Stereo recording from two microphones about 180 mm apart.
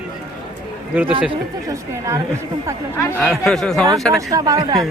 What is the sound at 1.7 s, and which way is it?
Speech, 15° right (ahead or behind).